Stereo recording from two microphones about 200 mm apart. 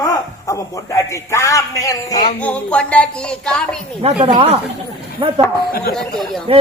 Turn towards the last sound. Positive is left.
turn(degrees=-25)  # may be behind; listen again after turning